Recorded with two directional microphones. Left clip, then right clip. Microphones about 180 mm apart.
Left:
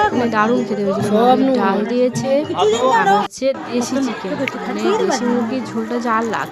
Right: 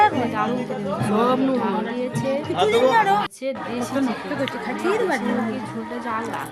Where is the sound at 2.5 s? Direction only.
60° right (ahead or behind).